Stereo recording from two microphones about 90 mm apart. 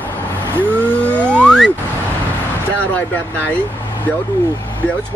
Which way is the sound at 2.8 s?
15° left (ahead or behind).